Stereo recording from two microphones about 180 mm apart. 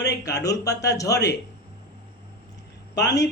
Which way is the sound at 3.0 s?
20° left (ahead or behind).